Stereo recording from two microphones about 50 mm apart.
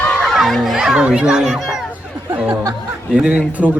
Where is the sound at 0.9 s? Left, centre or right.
Centre.